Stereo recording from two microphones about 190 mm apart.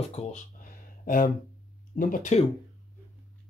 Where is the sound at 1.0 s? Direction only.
45° left (ahead or behind).